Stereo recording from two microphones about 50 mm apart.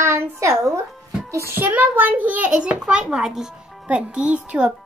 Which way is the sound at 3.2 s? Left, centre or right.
Centre.